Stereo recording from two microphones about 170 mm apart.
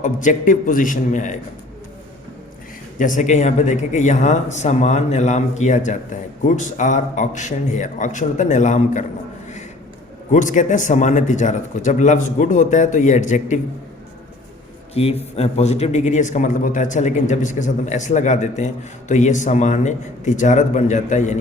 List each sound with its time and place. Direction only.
0.0 s a man's voice: 50° left (ahead or behind)
3.0 s a man's voice: 50° left (ahead or behind)
10.3 s a man's voice: 45° left (ahead or behind)
14.9 s a man's voice: 35° left (ahead or behind)